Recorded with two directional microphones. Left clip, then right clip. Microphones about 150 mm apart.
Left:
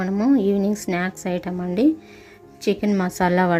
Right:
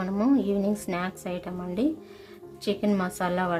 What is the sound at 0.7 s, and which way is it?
A woman's voice, 25° left (ahead or behind).